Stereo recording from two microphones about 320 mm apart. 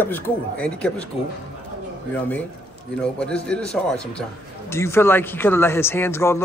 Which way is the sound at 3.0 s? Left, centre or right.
Centre.